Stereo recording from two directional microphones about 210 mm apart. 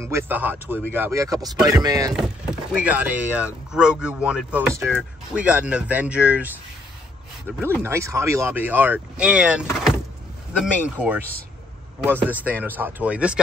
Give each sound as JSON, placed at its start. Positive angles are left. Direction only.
{"t": 0.0, "sound": "speech", "side_deg": -10}
{"t": 2.1, "sound": "speech", "side_deg": -5}